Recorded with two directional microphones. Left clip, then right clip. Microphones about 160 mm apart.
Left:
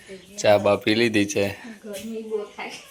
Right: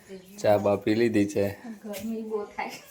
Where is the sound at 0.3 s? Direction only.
5° right (ahead or behind).